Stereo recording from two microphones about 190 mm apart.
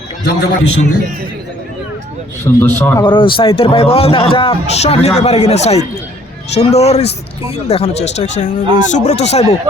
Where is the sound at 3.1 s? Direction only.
25° left (ahead or behind).